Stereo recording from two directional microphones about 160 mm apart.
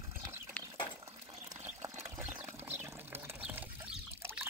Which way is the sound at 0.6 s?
10° left (ahead or behind).